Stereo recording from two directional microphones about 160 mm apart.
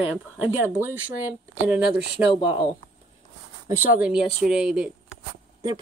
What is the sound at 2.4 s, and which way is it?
Speech, 35° left (ahead or behind).